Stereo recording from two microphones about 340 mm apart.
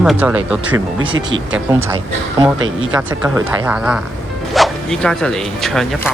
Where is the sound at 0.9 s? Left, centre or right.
Right.